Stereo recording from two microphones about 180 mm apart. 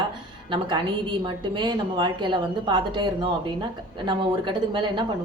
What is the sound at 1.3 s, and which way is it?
A woman's voice, 25° right (ahead or behind).